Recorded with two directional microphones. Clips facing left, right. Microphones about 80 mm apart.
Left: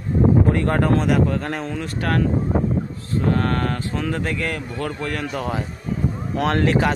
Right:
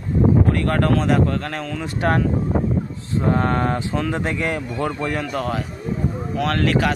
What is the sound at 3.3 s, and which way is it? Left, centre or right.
A man's voice, centre.